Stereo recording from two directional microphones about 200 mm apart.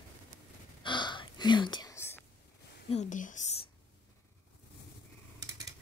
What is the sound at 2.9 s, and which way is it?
Whispering, 40° left (ahead or behind).